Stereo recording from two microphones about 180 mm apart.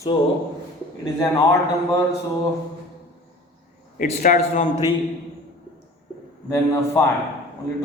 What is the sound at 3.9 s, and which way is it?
Speech, 45° left (ahead or behind).